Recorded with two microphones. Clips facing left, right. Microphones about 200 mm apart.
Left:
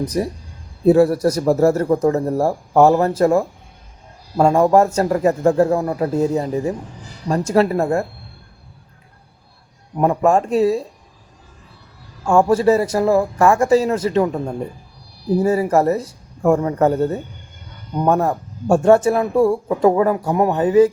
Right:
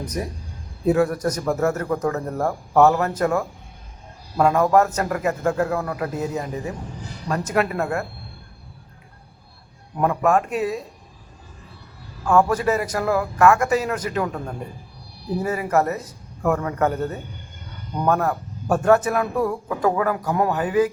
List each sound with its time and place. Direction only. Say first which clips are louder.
0.1 s a man's voice: left 7 dB; 35° left (ahead or behind)
10.0 s speech: left 4 dB; 30° left (ahead or behind)
12.2 s speech: left 4 dB; 30° left (ahead or behind)